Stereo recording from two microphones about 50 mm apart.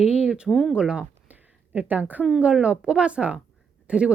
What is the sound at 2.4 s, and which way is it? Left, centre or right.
Speech, right.